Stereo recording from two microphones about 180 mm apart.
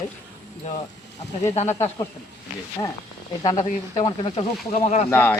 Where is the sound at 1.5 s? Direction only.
40° left (ahead or behind).